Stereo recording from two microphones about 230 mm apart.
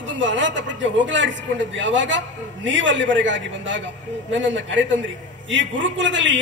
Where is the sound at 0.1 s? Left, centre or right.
Right.